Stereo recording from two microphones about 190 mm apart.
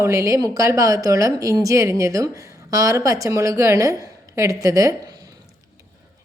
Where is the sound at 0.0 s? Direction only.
15° right (ahead or behind).